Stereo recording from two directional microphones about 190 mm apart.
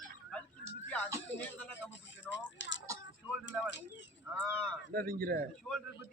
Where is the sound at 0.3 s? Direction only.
5° left (ahead or behind).